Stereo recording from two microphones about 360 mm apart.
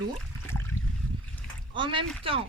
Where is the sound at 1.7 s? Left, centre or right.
Centre.